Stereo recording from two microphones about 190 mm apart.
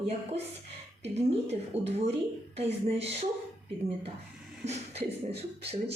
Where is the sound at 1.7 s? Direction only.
35° right (ahead or behind).